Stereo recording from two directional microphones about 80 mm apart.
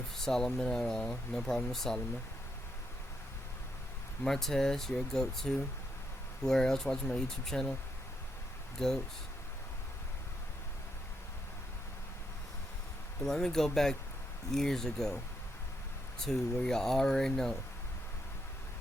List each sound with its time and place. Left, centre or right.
0.3 s speech: centre
4.3 s speech: centre
8.8 s speech: centre
13.2 s speech: centre
16.2 s speech: centre